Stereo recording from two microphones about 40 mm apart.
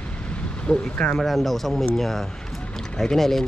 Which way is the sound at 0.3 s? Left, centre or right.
Left.